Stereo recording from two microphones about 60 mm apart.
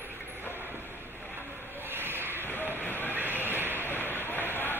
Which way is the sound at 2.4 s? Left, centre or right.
Left.